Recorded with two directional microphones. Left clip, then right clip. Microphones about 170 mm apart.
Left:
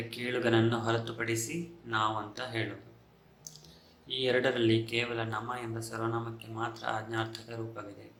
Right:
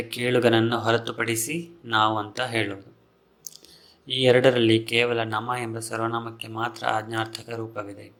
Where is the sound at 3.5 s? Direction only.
40° right (ahead or behind).